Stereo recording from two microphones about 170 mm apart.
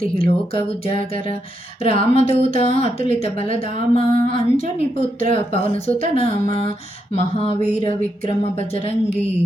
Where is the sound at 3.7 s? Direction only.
50° right (ahead or behind).